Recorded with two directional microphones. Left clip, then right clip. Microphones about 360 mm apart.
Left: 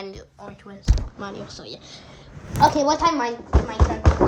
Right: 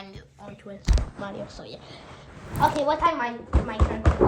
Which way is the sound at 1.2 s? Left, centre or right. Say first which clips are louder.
Left 1 dB; centre.